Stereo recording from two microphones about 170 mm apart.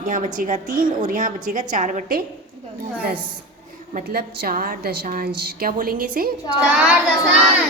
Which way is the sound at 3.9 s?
60° right (ahead or behind).